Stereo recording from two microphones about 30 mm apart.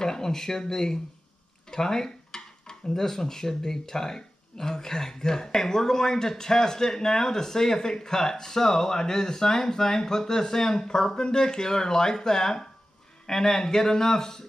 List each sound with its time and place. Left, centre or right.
0.0 s speech: centre
1.7 s dishes: centre
2.9 s a man's voice: centre